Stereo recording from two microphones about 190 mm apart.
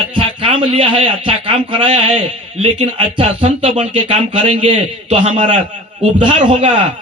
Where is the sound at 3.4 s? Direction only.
40° right (ahead or behind).